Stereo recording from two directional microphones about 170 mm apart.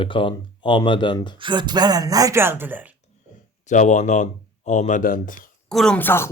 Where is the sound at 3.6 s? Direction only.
45° left (ahead or behind).